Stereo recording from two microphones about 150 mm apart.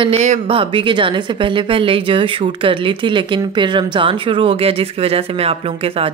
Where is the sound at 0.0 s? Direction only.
50° right (ahead or behind).